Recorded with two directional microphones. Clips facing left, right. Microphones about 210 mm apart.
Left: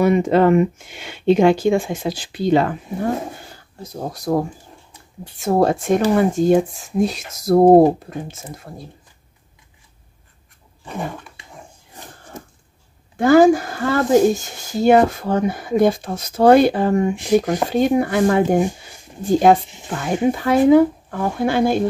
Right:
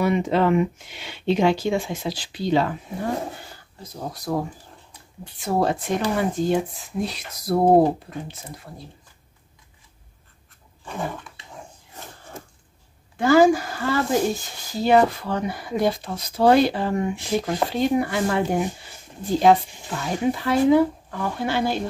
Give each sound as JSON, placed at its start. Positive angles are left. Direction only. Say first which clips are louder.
{"t": 0.0, "sound": "speech", "louder": "left 6 dB", "side_deg": 50}
{"t": 13.2, "sound": "speech", "louder": "left 4 dB", "side_deg": 50}
{"t": 17.1, "sound": "speech", "louder": "left 7 dB", "side_deg": 15}
{"t": 17.6, "sound": "speech", "louder": "left 5 dB", "side_deg": 50}